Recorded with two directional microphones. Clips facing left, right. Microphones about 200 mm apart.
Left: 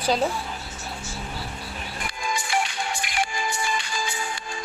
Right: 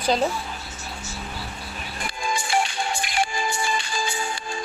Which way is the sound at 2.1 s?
30° right (ahead or behind).